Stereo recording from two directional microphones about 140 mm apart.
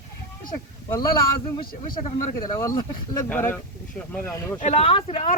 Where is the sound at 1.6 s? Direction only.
90° left.